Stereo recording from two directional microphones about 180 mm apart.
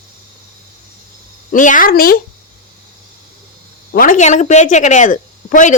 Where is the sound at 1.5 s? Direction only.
45° left (ahead or behind).